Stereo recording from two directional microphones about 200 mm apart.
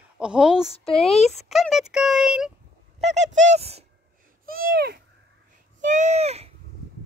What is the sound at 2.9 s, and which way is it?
Speech, 35° right (ahead or behind).